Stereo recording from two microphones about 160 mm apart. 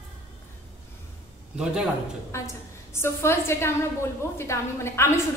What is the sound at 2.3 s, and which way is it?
A woman's voice, 15° left (ahead or behind).